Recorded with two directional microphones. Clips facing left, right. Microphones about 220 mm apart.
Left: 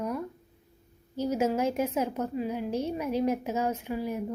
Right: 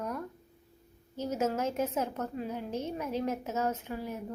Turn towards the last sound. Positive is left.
turn(degrees=10)  # may be behind; listen again after turning